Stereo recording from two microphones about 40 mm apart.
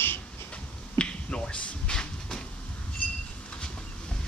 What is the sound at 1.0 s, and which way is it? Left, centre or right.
Finger snapping, left.